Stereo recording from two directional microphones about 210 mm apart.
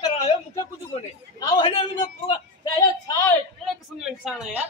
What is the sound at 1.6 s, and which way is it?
Speech, 25° left (ahead or behind).